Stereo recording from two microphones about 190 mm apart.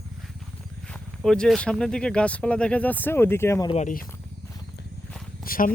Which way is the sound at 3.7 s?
40° left (ahead or behind).